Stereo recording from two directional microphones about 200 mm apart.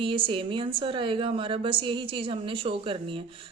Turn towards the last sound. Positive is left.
turn(degrees=-25)  # may be behind; listen again after turning